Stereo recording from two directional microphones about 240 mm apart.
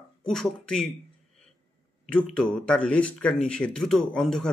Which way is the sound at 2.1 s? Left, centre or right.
Centre.